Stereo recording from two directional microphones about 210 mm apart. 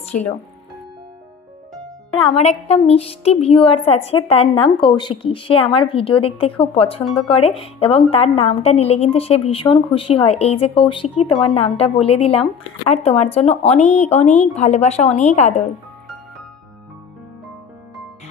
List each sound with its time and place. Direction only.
0.1 s speech: 10° left (ahead or behind)
2.1 s a woman's voice: 25° left (ahead or behind)